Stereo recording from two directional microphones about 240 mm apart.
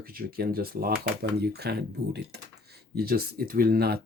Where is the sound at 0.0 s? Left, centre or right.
Right.